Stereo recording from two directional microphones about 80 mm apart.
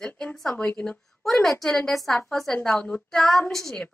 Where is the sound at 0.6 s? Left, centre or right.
Centre.